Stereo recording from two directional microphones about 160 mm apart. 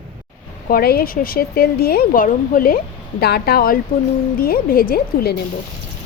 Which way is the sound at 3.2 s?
90° left.